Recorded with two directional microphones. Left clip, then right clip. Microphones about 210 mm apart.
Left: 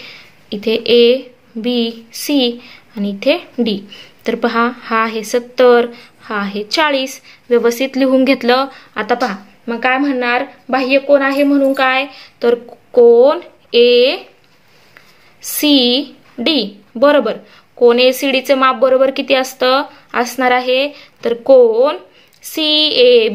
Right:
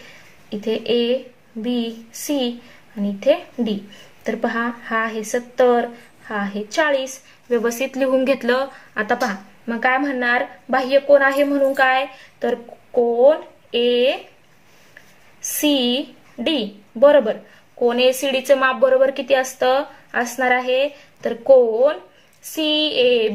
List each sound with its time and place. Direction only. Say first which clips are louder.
0.0 s a sound: left 8 dB; 40° left (ahead or behind)
1.6 s a woman's voice: left 7 dB; 40° left (ahead or behind)
15.4 s a woman's voice: left 7 dB; 35° left (ahead or behind)